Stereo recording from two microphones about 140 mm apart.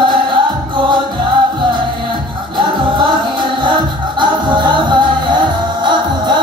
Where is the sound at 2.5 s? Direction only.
35° right (ahead or behind).